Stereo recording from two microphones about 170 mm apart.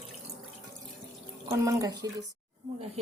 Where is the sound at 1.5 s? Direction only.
20° right (ahead or behind).